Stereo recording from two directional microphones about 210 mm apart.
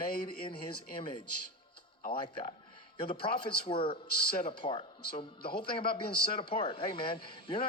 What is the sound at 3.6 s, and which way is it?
A man's voice, 25° left (ahead or behind).